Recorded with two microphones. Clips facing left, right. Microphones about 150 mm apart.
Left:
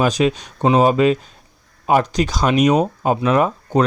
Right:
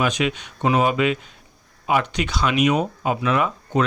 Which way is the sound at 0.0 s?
35° left (ahead or behind).